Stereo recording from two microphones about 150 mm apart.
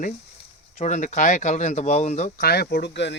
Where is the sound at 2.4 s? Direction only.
90° left.